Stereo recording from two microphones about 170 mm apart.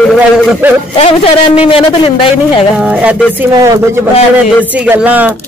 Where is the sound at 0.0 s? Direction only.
Centre (ahead or behind).